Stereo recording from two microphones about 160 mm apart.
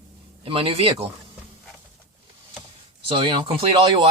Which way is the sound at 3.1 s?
35° right (ahead or behind).